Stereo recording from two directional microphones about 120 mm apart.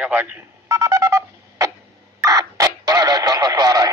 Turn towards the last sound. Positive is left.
turn(degrees=-30)  # may be behind; listen again after turning